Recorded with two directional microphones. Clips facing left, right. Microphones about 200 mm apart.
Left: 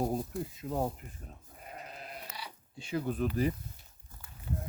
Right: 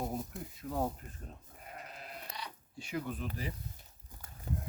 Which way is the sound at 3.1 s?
45° left (ahead or behind).